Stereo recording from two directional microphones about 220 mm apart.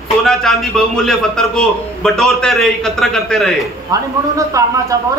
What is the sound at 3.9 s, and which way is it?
A man's voice, 15° right (ahead or behind).